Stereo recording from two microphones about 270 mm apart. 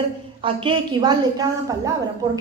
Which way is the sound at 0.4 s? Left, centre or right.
Centre.